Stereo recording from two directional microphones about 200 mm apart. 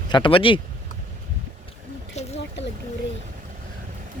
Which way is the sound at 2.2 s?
35° left (ahead or behind).